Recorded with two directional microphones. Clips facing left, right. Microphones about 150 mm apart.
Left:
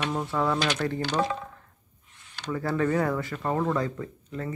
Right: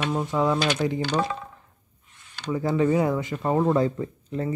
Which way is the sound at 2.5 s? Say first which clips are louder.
Right 4 dB; 15° right (ahead or behind).